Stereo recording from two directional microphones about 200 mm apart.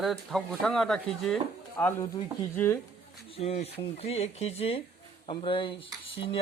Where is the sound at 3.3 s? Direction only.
30° left (ahead or behind).